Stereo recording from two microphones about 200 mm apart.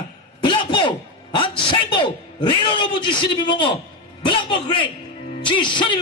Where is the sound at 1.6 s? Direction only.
25° left (ahead or behind).